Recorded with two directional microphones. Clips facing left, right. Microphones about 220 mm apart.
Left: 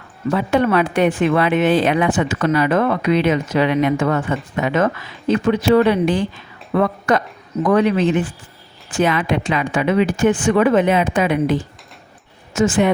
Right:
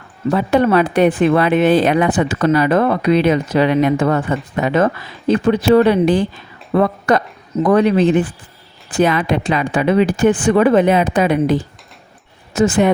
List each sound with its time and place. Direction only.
0.3 s speech: 35° right (ahead or behind)